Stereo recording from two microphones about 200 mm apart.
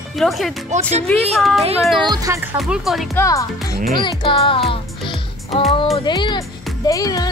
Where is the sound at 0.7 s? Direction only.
35° right (ahead or behind).